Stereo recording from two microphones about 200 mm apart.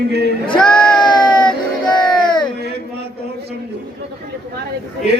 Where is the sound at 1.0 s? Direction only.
20° left (ahead or behind).